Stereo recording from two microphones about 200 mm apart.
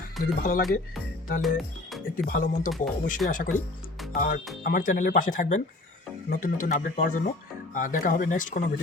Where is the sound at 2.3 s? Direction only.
45° left (ahead or behind).